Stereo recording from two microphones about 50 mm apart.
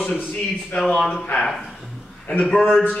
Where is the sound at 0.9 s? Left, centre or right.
Centre.